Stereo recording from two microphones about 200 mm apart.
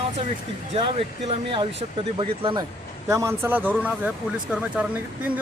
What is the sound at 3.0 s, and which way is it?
Speech, 15° right (ahead or behind).